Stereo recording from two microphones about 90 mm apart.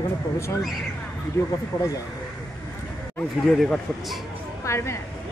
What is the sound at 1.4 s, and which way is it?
Speech, 30° left (ahead or behind).